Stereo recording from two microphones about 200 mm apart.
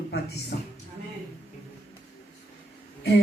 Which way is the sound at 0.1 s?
55° left (ahead or behind).